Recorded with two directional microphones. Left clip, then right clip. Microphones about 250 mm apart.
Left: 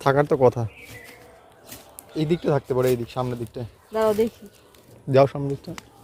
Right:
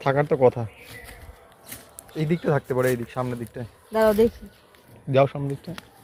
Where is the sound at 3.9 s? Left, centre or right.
Right.